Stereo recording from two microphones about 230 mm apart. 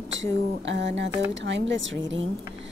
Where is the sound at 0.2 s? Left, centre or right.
Right.